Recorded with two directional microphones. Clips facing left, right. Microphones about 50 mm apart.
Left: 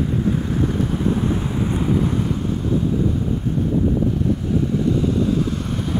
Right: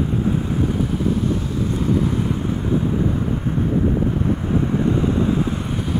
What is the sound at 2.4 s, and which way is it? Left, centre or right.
Vehicle, right.